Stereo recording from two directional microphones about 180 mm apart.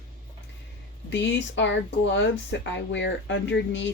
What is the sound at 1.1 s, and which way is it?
Speech, 85° left.